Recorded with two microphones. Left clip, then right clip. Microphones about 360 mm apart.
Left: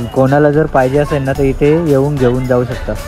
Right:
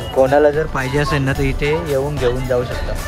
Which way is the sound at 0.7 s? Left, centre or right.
Centre.